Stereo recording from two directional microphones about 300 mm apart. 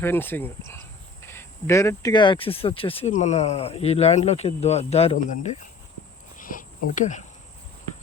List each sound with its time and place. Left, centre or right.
0.0 s speech: centre; by 5.5 s left
6.3 s cricket: left